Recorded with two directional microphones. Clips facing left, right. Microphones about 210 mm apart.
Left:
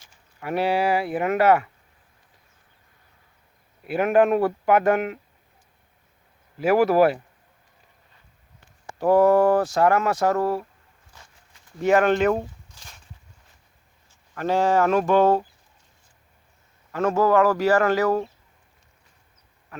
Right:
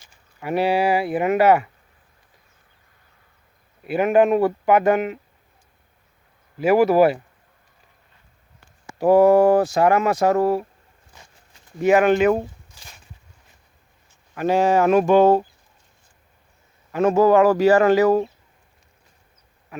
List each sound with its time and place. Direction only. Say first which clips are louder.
0.0 s speech: right 2 dB; 5° right (ahead or behind)
3.8 s speech: right 2 dB; centre (ahead or behind)
6.6 s speech: right 2 dB; centre (ahead or behind)
9.0 s speech: right 3 dB; 10° right (ahead or behind)
11.1 s a sound: right 2 dB; 15° right (ahead or behind)
11.8 s speech: right 3 dB; 10° right (ahead or behind)
14.3 s speech: right 3 dB; 15° right (ahead or behind)
16.9 s speech: right 4 dB; 15° right (ahead or behind)